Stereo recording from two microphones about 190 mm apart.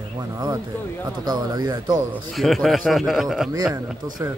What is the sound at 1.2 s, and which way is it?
Speech, 20° right (ahead or behind).